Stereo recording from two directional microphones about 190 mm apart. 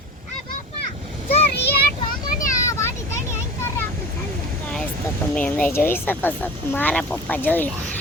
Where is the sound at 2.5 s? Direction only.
15° left (ahead or behind).